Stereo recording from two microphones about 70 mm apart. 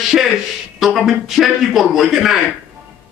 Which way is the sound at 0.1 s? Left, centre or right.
Centre.